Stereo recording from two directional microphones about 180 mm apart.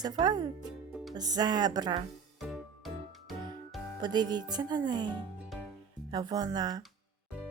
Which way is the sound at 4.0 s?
25° right (ahead or behind).